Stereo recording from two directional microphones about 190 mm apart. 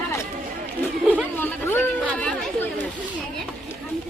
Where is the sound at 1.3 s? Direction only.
10° left (ahead or behind).